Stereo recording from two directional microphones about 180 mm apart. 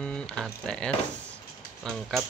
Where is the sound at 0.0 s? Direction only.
5° left (ahead or behind).